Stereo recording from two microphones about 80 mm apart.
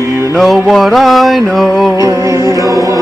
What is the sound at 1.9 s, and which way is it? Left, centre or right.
Music, right.